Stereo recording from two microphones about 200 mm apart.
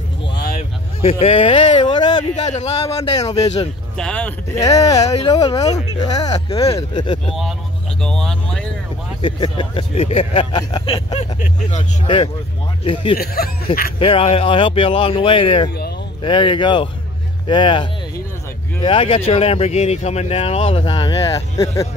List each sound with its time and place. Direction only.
0.4 s vehicle: 50° left (ahead or behind)
1.0 s a sound: 30° left (ahead or behind)
2.3 s a man's voice: 35° left (ahead or behind)
3.1 s speech: 20° left (ahead or behind)
3.9 s speech: 5° left (ahead or behind)
4.6 s speech: 15° left (ahead or behind)
8.0 s speech: centre (ahead or behind)
9.2 s speech: 25° left (ahead or behind)
13.2 s speech: 50° left (ahead or behind)
13.9 s speech: 25° left (ahead or behind)